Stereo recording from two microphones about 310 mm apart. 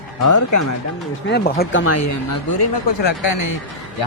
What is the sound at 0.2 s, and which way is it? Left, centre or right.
Music, left.